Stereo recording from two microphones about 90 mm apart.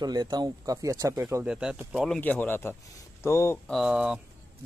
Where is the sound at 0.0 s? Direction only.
50° right (ahead or behind).